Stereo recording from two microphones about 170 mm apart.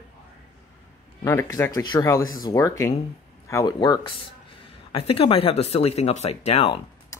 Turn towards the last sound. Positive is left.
turn(degrees=35)  # may be behind; listen again after turning